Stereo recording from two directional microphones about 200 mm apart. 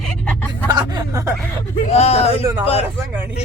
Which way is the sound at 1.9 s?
30° left (ahead or behind).